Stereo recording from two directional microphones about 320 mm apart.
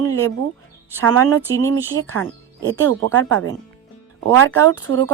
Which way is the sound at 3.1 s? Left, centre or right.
Right.